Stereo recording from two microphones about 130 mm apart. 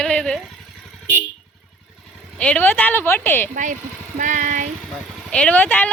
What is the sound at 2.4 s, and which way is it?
A woman's voice, 10° left (ahead or behind).